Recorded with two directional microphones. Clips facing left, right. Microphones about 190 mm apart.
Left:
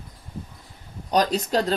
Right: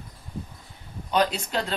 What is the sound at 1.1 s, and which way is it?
Speech, 40° left (ahead or behind).